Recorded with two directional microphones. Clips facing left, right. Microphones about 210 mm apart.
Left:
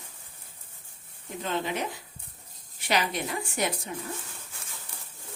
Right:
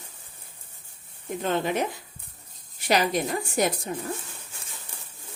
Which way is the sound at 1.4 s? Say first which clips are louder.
Right 5 dB; 50° right (ahead or behind).